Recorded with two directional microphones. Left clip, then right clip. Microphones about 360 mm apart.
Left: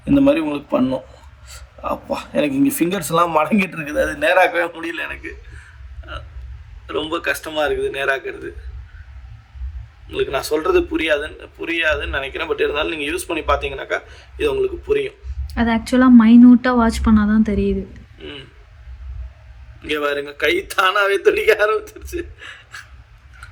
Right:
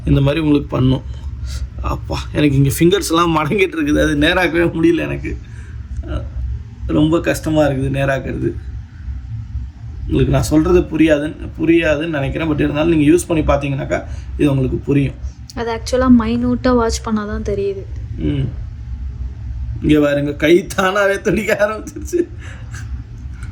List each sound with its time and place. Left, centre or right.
0.0 s a woman's voice: centre
6.8 s speech: centre
10.2 s speech: centre
15.5 s a woman's voice: centre
18.2 s speech: centre
19.8 s speech: centre